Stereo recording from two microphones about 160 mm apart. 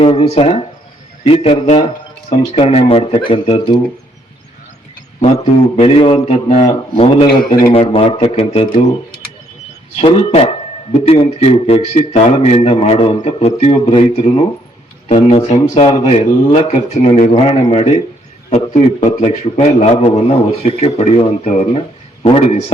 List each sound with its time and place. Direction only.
0.0 s a man's voice: 40° left (ahead or behind)
5.4 s a man's voice: 35° left (ahead or behind)
6.2 s a man's voice: 45° left (ahead or behind)
7.3 s a man's voice: 55° left (ahead or behind)
7.7 s a man's voice: 35° left (ahead or behind)
10.0 s a man's voice: 40° left (ahead or behind)